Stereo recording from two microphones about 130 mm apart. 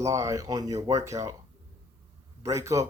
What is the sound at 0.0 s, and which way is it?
Speech, 25° right (ahead or behind).